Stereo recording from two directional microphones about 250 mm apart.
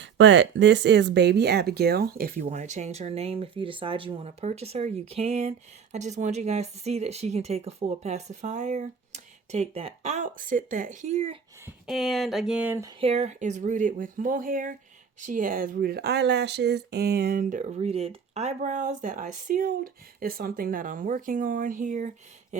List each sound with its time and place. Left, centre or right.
0.0 s speech: right
11.6 s speech: centre
13.0 s speech: right